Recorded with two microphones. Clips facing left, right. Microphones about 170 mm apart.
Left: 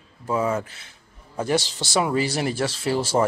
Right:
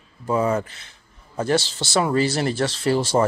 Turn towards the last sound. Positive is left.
turn(degrees=5)  # may be behind; listen again after turning